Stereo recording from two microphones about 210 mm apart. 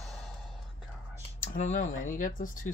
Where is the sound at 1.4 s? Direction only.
35° left (ahead or behind).